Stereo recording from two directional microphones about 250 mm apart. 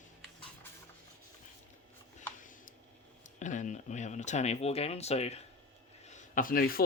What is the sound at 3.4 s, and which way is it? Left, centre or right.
Speech, left.